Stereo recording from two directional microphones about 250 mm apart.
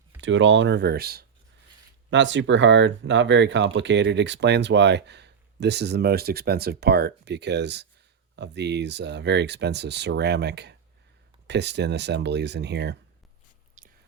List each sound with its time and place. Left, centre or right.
0.2 s speech: right
13.8 s whispering: right